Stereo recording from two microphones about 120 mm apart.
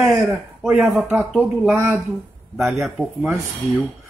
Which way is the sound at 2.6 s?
Centre (ahead or behind).